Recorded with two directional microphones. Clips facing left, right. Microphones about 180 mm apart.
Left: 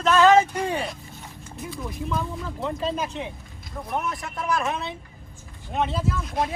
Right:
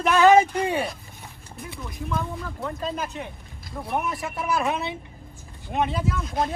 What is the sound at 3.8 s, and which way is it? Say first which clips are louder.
Speech: right 2 dB; 5° right (ahead or behind).